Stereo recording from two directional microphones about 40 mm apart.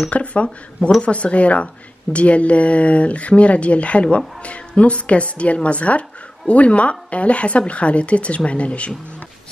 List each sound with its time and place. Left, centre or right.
0.1 s a woman's voice: left